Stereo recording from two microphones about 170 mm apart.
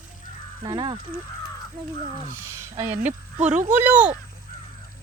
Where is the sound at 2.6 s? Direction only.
15° right (ahead or behind).